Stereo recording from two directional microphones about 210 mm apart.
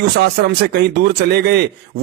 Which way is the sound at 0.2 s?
50° right (ahead or behind).